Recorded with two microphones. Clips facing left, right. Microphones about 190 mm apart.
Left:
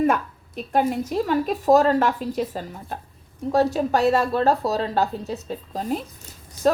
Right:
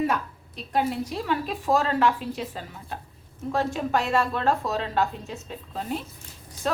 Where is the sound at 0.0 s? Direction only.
50° left (ahead or behind).